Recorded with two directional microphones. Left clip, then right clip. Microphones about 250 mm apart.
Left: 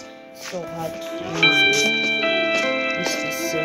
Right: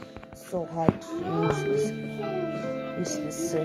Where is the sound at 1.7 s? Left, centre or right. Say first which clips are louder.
Left 10 dB; left.